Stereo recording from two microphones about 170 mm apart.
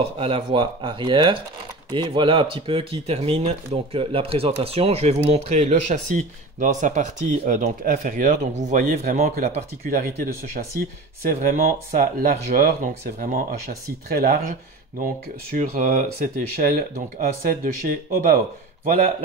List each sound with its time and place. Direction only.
0.0 s speech: 35° right (ahead or behind); by 18.4 s 55° right (ahead or behind)